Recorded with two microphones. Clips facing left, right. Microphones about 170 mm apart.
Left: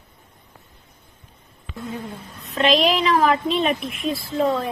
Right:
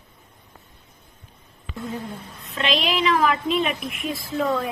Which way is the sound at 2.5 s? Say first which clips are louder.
Left 6 dB; 40° left (ahead or behind).